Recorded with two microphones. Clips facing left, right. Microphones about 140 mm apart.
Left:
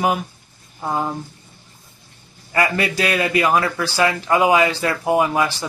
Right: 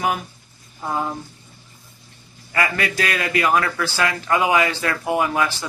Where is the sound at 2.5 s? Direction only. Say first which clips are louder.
Left 3 dB; 30° left (ahead or behind).